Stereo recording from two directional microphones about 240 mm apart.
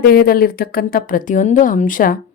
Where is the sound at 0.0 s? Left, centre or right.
Left.